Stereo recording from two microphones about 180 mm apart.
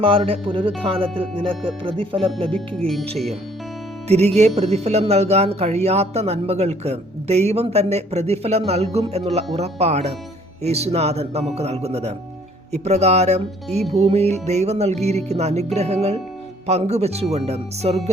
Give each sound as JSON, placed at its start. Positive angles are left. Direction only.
{"t": 0.3, "sound": "speech", "side_deg": -30}
{"t": 2.6, "sound": "speech", "side_deg": 0}
{"t": 4.4, "sound": "speech", "side_deg": -35}